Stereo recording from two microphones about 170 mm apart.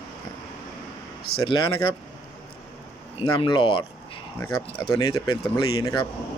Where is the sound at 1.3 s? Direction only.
30° left (ahead or behind).